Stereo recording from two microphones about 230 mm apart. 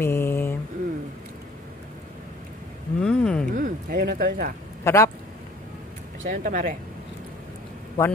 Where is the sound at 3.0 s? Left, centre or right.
Centre.